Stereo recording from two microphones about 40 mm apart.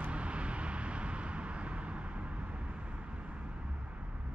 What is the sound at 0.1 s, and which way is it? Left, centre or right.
Vehicle, right.